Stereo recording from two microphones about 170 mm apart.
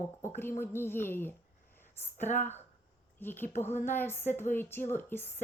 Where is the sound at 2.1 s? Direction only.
45° left (ahead or behind).